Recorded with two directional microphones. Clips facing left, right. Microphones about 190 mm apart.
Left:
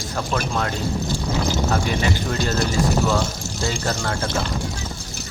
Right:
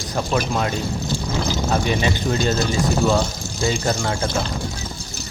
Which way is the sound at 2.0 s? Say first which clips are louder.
Right 2 dB; 15° right (ahead or behind).